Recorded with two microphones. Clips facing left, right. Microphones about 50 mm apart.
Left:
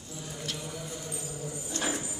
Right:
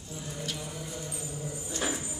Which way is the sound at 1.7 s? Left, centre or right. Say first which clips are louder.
Left 1 dB; centre.